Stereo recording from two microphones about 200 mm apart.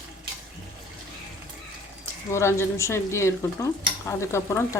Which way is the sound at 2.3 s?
15° left (ahead or behind).